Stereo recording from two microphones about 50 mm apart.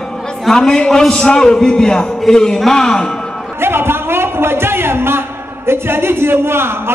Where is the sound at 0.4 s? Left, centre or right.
Centre.